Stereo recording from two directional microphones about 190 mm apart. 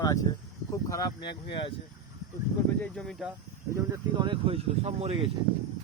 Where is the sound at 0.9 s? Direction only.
20° left (ahead or behind).